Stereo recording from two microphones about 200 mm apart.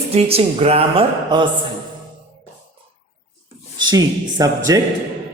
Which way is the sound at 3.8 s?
20° right (ahead or behind).